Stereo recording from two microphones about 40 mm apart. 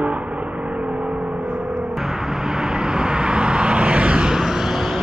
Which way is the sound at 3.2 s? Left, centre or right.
Right.